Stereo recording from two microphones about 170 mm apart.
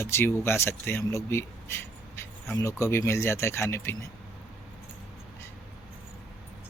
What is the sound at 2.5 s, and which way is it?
Speech, 15° left (ahead or behind).